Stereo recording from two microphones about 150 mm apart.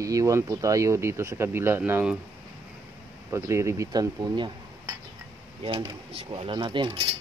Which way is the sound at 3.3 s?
20° right (ahead or behind).